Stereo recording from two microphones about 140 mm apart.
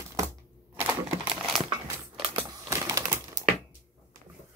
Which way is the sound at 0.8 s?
10° right (ahead or behind).